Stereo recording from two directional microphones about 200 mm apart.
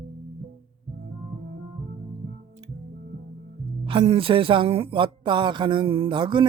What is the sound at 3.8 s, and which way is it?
Speech, 25° right (ahead or behind).